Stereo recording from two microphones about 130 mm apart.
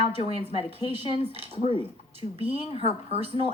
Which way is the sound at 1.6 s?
45° left (ahead or behind).